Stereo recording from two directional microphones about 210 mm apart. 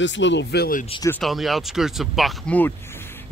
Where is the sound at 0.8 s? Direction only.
25° left (ahead or behind).